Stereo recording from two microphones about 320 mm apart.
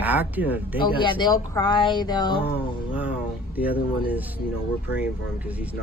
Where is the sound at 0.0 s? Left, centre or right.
Centre.